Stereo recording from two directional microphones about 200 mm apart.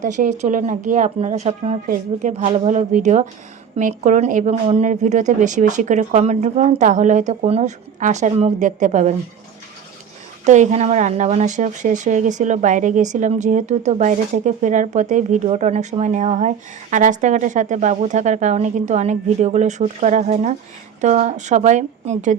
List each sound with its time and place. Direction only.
0.0 s speech: 40° right (ahead or behind)
10.4 s speech: 35° right (ahead or behind)